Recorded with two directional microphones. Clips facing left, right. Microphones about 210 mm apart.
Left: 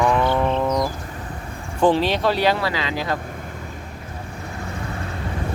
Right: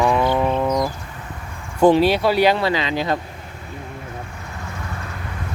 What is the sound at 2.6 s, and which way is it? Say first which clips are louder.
Speech: right 4 dB; 20° right (ahead or behind).